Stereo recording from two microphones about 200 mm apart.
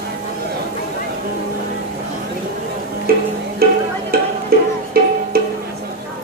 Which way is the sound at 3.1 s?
50° right (ahead or behind).